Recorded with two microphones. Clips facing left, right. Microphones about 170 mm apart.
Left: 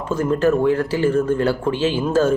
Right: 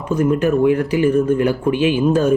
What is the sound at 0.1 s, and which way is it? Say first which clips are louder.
Speech: right 2 dB; 15° right (ahead or behind).